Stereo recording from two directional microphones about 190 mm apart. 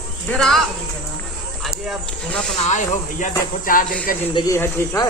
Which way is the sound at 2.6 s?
40° left (ahead or behind).